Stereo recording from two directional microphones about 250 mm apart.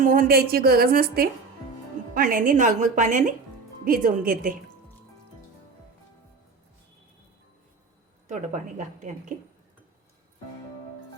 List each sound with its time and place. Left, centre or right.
0.0 s a woman's voice: right
8.3 s speech: right